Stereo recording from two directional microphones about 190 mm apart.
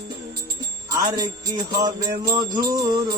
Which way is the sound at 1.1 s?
20° right (ahead or behind).